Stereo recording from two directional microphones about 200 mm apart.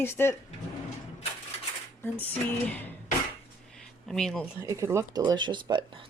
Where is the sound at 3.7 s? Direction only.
Centre (ahead or behind).